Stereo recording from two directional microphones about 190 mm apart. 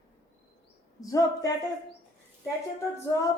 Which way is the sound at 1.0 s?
20° left (ahead or behind).